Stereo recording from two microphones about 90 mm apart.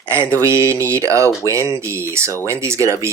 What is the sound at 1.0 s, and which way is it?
Speech, 35° right (ahead or behind).